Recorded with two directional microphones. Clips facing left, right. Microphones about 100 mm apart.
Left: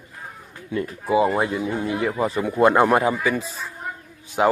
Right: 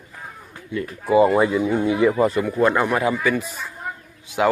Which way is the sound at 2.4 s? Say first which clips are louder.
Left 2 dB; 20° left (ahead or behind).